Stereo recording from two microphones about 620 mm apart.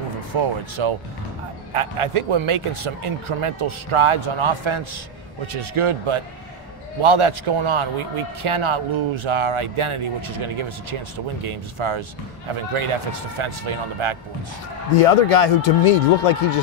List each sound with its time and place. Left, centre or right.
0.3 s a man's voice: right
15.0 s speech: left